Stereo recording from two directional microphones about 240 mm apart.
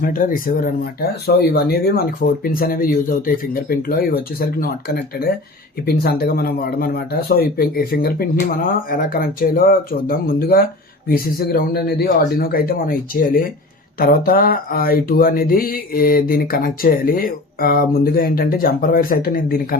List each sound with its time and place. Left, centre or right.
0.0 s speech: left